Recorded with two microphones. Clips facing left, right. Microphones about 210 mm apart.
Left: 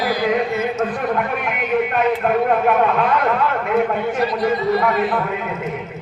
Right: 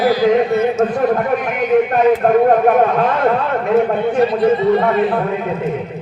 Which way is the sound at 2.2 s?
40° right (ahead or behind).